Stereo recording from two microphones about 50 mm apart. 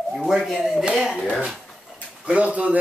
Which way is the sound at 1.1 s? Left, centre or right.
Centre.